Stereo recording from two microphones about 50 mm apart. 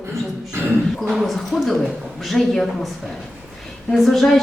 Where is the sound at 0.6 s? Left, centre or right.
Right.